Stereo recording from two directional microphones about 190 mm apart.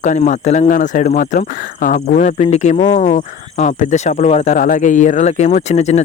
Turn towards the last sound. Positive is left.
turn(degrees=35)  # may be behind; listen again after turning